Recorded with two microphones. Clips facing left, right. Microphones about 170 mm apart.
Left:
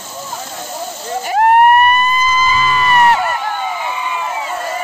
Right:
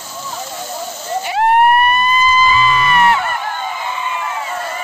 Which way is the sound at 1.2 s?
45° left (ahead or behind).